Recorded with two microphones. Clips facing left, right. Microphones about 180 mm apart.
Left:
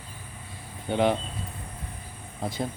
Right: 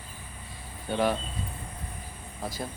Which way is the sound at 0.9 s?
20° left (ahead or behind).